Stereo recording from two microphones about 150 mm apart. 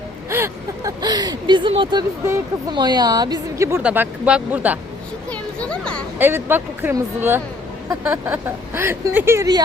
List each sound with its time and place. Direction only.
0.3 s speech: 15° right (ahead or behind); by 2.0 s 30° right (ahead or behind)
2.2 s speech: 15° right (ahead or behind)
2.7 s a woman's voice: 30° right (ahead or behind)
3.8 s speech: 10° right (ahead or behind)
5.3 s a sound: 5° left (ahead or behind)
6.1 s speech: 15° right (ahead or behind)